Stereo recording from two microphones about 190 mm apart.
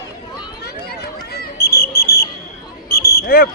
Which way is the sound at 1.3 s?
55° left (ahead or behind).